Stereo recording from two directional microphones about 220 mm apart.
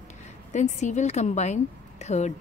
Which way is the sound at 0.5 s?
35° left (ahead or behind).